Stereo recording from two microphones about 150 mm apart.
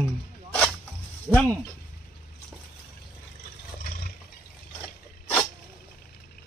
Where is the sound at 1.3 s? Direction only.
5° left (ahead or behind).